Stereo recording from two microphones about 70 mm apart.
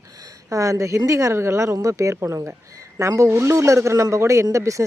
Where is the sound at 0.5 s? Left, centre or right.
Right.